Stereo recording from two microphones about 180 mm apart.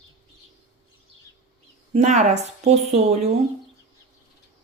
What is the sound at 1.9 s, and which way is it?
Speech, 40° right (ahead or behind).